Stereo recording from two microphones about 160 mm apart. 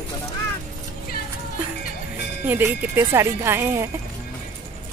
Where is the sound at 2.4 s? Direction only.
15° right (ahead or behind).